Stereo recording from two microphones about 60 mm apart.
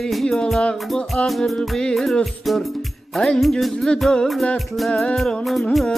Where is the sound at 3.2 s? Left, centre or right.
Centre.